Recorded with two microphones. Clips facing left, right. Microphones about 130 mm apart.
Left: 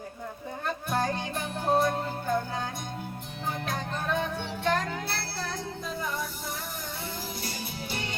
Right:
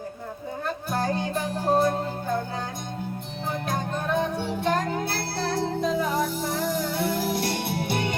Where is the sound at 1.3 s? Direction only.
35° right (ahead or behind).